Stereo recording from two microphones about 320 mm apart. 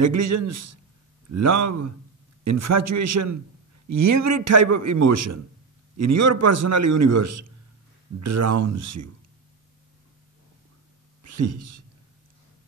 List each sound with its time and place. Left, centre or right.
0.0 s a man's voice: right
11.2 s speech: right